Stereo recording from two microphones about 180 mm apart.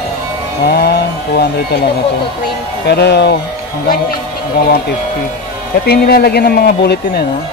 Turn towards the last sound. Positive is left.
turn(degrees=60)  # may be behind; listen again after turning